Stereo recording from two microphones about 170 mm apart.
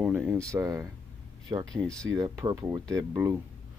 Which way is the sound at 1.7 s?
5° left (ahead or behind).